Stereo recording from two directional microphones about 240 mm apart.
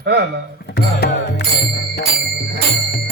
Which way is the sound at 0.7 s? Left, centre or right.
Left.